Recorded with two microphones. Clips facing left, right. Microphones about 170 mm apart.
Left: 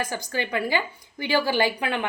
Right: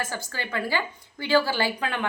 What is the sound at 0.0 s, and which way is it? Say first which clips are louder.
A woman's voice: left 4 dB; 15° left (ahead or behind).